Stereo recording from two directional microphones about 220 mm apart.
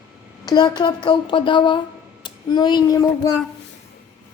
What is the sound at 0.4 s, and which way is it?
A child's voice, 20° left (ahead or behind).